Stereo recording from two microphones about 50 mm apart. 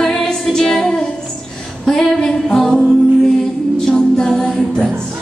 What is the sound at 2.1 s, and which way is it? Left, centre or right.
Music, centre.